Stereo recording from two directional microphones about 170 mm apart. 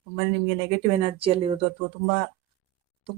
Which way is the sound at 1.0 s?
35° right (ahead or behind).